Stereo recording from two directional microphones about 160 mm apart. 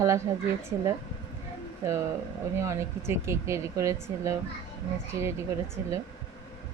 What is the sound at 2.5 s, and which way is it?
Speech, 15° right (ahead or behind).